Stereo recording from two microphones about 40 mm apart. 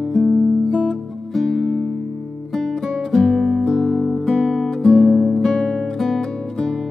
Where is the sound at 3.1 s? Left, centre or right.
Centre.